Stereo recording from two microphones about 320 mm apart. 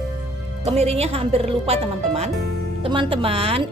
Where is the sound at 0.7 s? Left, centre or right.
Centre.